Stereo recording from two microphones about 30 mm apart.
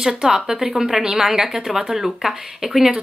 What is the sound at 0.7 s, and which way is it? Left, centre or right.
Speech, centre.